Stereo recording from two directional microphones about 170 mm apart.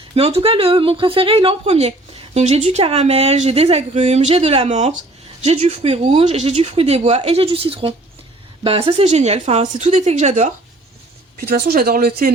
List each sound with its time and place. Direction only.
0.1 s speech: 35° right (ahead or behind)
11.3 s speech: 65° right (ahead or behind)